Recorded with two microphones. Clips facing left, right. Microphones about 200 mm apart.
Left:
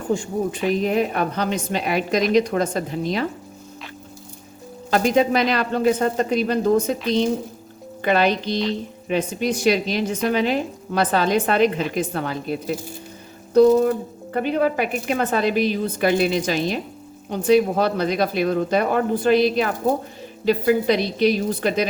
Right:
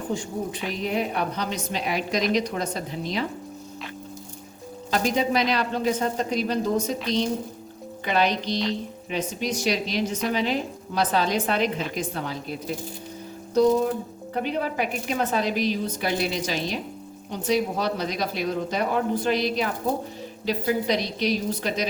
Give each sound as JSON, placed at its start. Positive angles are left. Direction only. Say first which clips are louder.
{"t": 0.1, "sound": "a woman's voice", "louder": "left 8 dB", "side_deg": 50}
{"t": 4.9, "sound": "a woman's voice", "louder": "left 6 dB", "side_deg": 55}